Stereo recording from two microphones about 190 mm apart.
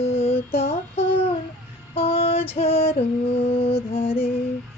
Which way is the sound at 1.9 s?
30° left (ahead or behind).